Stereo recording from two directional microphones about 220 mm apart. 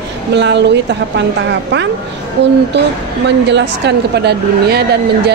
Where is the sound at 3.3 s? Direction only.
50° right (ahead or behind).